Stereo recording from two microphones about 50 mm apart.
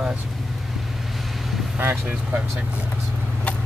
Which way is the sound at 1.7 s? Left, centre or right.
Right.